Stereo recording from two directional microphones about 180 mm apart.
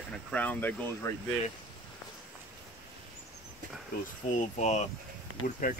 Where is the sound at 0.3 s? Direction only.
10° left (ahead or behind).